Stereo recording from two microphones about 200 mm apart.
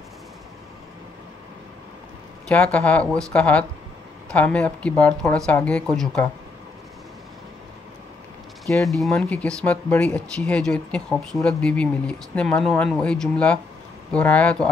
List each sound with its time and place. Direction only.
2.4 s speech: 5° left (ahead or behind)
8.8 s speech: centre (ahead or behind)